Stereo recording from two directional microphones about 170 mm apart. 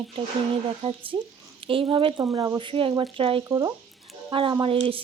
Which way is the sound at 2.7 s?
30° right (ahead or behind).